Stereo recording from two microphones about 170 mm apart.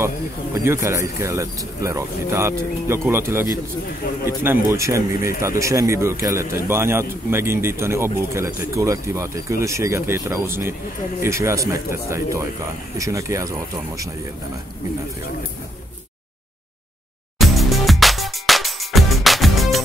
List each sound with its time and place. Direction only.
0.7 s speech: 15° right (ahead or behind)
17.4 s music: centre (ahead or behind)